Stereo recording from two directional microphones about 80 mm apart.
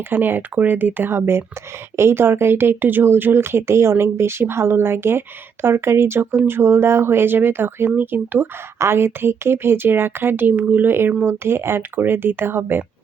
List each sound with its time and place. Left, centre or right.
0.0 s speech: right